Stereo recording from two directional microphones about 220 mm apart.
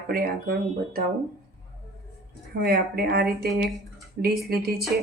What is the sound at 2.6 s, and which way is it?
Speech, 45° right (ahead or behind).